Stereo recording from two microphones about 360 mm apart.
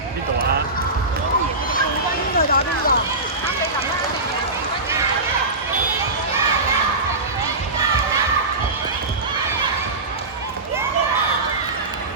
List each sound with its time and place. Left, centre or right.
2.5 s run: left